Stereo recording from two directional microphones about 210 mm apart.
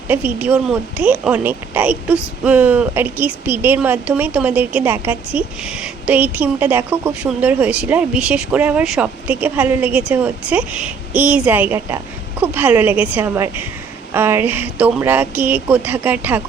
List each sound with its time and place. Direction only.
0.1 s speech: 5° right (ahead or behind)